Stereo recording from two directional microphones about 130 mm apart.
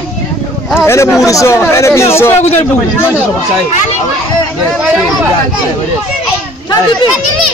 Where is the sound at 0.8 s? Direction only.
20° left (ahead or behind).